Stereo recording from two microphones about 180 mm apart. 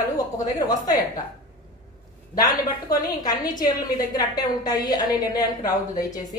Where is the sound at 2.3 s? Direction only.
20° left (ahead or behind).